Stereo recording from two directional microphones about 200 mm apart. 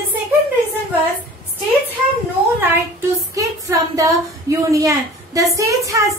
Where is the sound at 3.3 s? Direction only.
15° right (ahead or behind).